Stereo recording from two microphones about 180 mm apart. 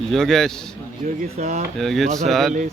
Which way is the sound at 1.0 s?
45° right (ahead or behind).